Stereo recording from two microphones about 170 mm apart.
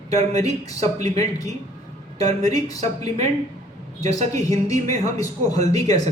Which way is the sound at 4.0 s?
40° right (ahead or behind).